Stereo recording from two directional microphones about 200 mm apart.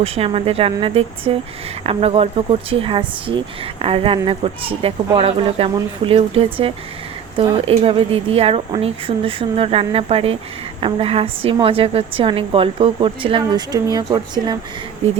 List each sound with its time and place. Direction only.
0.0 s a woman's voice: 30° right (ahead or behind)